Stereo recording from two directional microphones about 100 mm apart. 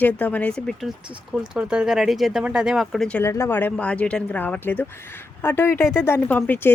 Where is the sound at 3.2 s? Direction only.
30° left (ahead or behind).